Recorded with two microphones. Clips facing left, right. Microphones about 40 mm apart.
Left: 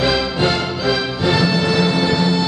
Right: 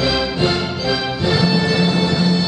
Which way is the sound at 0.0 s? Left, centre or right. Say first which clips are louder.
Left 1 dB; centre.